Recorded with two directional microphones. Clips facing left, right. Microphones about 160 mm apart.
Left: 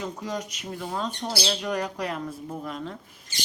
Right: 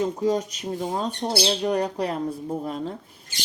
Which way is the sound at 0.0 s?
30° right (ahead or behind).